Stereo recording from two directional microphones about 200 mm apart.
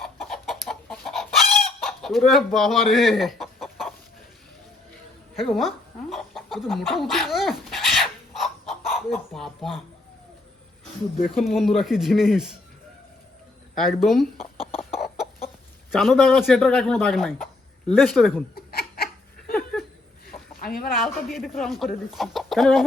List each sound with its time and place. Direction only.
0.0 s chicken: centre (ahead or behind)
5.4 s dog: centre (ahead or behind)
11.4 s speech: centre (ahead or behind)
13.7 s speech: centre (ahead or behind)
15.9 s speech: centre (ahead or behind)
18.5 s laughter: 50° left (ahead or behind)
20.7 s speech: 45° left (ahead or behind)
20.9 s speech: centre (ahead or behind)